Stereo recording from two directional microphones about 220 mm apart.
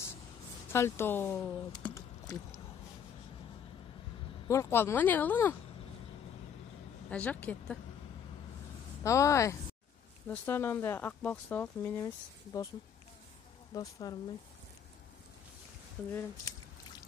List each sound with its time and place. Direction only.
0.7 s speech: 10° left (ahead or behind)
4.5 s speech: 10° left (ahead or behind)
7.1 s speech: 5° left (ahead or behind)
9.0 s speech: 15° left (ahead or behind)
13.7 s speech: 15° left (ahead or behind)
16.1 s speech: 10° left (ahead or behind)